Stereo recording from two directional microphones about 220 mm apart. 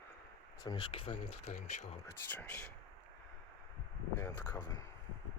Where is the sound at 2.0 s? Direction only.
10° left (ahead or behind).